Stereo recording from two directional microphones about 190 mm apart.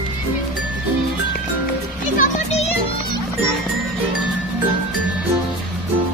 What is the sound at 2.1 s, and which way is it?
Music, 40° left (ahead or behind).